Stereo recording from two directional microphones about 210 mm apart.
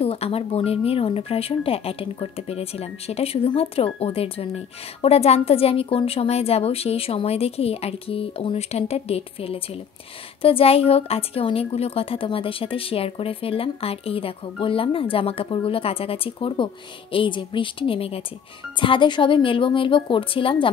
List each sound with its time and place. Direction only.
0.0 s speech: 30° left (ahead or behind)